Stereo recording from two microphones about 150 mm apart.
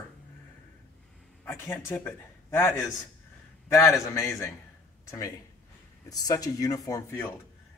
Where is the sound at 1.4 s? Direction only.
15° left (ahead or behind).